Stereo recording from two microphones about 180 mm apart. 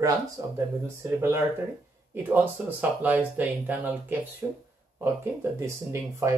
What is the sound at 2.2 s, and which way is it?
Speech, 10° right (ahead or behind).